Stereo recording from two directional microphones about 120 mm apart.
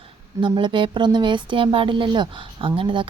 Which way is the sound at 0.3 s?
45° right (ahead or behind).